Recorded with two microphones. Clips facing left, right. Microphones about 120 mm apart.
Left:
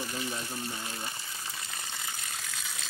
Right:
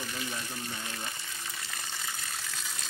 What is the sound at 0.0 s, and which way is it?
Speech, 35° left (ahead or behind).